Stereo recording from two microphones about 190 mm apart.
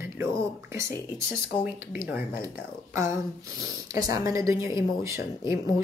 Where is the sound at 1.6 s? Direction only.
10° right (ahead or behind).